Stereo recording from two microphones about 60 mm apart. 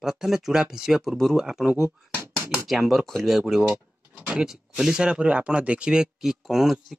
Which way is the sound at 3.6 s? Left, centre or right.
Right.